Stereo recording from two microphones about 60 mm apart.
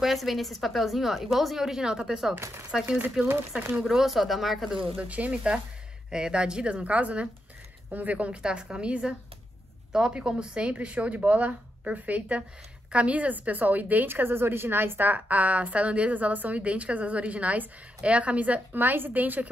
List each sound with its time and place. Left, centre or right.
0.0 s a woman's voice: centre
4.9 s a woman's voice: right